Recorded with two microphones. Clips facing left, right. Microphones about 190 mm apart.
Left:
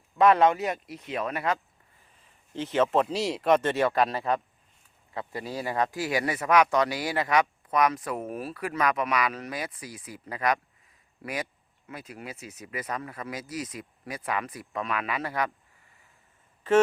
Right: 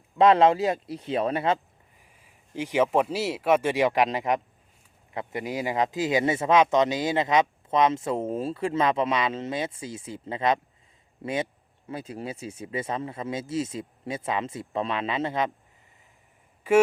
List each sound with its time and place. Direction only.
0.2 s speech: 25° right (ahead or behind)
2.0 s speech: 10° right (ahead or behind)
16.7 s speech: 10° right (ahead or behind)